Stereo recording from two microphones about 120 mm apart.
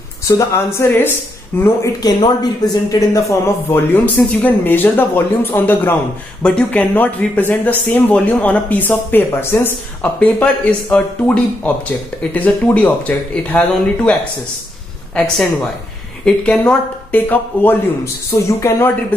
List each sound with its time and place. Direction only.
0.4 s speech: 25° left (ahead or behind)
15.1 s speech: 5° left (ahead or behind); by 19.1 s 25° left (ahead or behind)